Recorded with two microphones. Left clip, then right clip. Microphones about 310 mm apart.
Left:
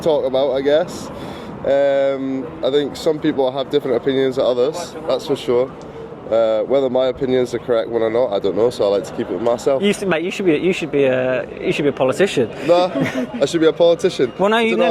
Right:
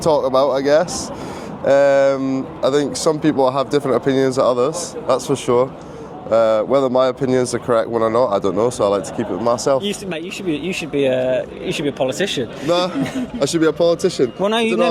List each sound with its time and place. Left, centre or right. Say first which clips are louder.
0.0 s speech: right 1 dB; right
5.0 s speech: right 1 dB; right
6.3 s speech: right 1 dB; right
9.8 s speech: left 6 dB; left
10.7 s speech: left 2 dB; centre
12.6 s speech: left 3 dB; right
13.7 s speech: left 3 dB; centre
14.3 s a man's voice: left 2 dB; centre